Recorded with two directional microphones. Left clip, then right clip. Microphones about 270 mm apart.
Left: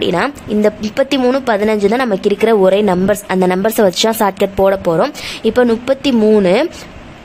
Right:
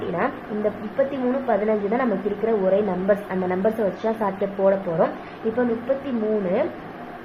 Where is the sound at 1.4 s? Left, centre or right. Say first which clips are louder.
Left 8 dB; left.